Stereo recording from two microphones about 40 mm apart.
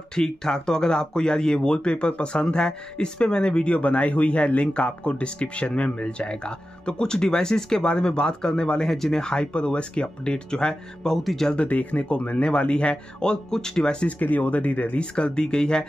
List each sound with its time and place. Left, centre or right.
0.1 s speech: centre
8.8 s speech: centre
11.6 s speech: left; by 14.0 s centre
14.2 s speech: left
15.0 s speech: left